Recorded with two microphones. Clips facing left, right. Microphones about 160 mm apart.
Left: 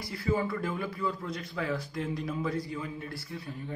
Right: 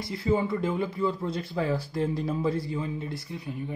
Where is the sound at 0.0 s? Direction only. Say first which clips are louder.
Right 4 dB; 20° right (ahead or behind).